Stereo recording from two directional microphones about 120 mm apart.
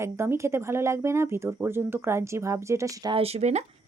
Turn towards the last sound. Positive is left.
turn(degrees=-70)  # may be behind; listen again after turning